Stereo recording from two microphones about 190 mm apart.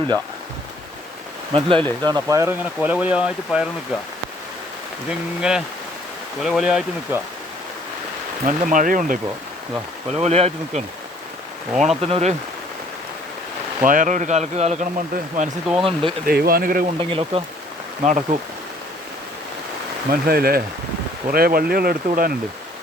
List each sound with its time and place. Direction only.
1.5 s speech: 30° right (ahead or behind); by 3.7 s 5° right (ahead or behind)
5.4 s speech: 5° right (ahead or behind)
8.4 s speech: 45° right (ahead or behind)
10.2 s speech: 35° right (ahead or behind)
11.7 s speech: centre (ahead or behind)
12.0 s speech: 30° right (ahead or behind)
13.8 s speech: 45° right (ahead or behind)
15.8 s speech: 30° right (ahead or behind)
16.2 s speech: 50° right (ahead or behind)
17.0 s speech: 30° right (ahead or behind)
18.0 s speech: 40° right (ahead or behind)
20.1 s speech: 55° right (ahead or behind)